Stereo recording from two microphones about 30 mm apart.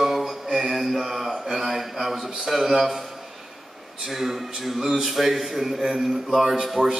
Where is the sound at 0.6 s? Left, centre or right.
Centre.